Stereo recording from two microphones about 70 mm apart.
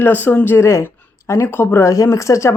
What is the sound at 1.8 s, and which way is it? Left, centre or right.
Speech, left.